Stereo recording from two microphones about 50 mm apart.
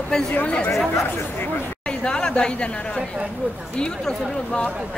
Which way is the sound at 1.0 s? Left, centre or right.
Left.